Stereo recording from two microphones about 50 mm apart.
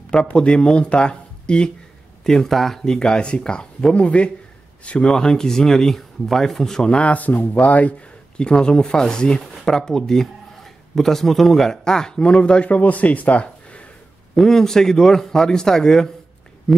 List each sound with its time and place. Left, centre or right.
0.1 s speech: left
2.2 s speech: centre; by 5.1 s left
5.1 s speech: centre
7.0 s speech: left
8.4 s speech: centre
14.3 s speech: centre